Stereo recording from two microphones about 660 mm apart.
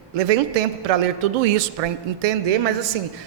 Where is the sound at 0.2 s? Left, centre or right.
Right.